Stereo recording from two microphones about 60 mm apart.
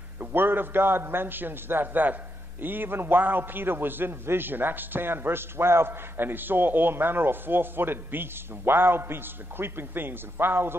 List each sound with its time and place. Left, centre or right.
0.2 s a man's voice: right